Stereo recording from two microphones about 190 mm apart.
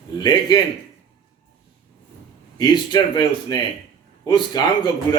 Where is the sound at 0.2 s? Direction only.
20° left (ahead or behind).